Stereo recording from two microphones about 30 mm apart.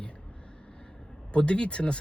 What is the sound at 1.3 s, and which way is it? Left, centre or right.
Speech, left.